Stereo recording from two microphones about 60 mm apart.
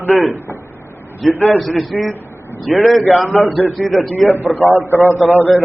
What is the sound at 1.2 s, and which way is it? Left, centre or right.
A man's voice, centre.